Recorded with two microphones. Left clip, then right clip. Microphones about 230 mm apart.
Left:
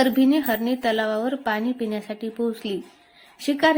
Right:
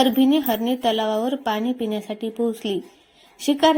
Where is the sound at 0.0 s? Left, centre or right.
Centre.